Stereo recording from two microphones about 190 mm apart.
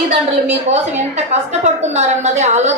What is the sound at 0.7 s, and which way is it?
A woman's voice, 35° right (ahead or behind).